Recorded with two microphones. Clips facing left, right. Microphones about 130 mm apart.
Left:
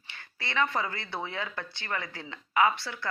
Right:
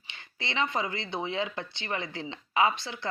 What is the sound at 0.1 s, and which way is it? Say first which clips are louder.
A woman's voice: even; 20° right (ahead or behind).